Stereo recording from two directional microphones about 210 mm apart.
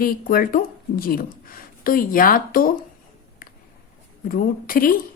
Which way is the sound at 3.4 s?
40° left (ahead or behind).